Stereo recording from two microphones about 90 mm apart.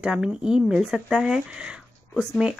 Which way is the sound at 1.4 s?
10° right (ahead or behind).